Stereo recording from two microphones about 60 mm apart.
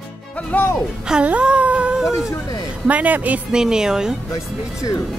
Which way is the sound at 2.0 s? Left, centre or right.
Centre.